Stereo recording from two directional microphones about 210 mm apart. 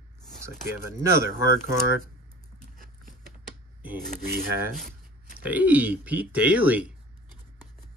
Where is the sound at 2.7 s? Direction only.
40° right (ahead or behind).